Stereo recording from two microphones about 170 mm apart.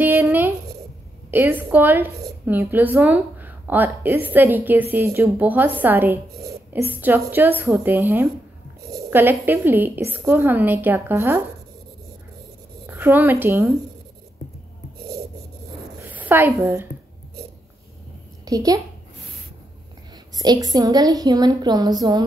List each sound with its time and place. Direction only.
0.0 s a sound: 15° right (ahead or behind)
1.3 s a woman's voice: 10° right (ahead or behind)
12.8 s speech: 10° right (ahead or behind)
16.0 s a sound: 10° right (ahead or behind)
18.4 s a woman's voice: 20° right (ahead or behind)
20.3 s a woman's voice: 25° right (ahead or behind)